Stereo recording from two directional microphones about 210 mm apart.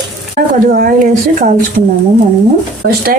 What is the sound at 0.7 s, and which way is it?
Speech, 40° right (ahead or behind).